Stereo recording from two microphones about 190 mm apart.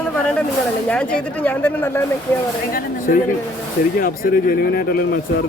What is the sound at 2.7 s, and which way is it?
Speech, 50° left (ahead or behind).